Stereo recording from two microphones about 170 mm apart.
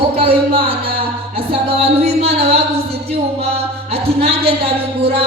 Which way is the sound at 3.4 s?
35° right (ahead or behind).